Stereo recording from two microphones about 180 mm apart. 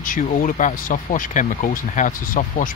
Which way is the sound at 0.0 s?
50° left (ahead or behind).